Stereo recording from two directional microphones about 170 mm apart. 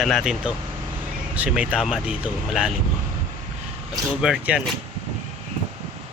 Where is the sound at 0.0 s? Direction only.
Centre (ahead or behind).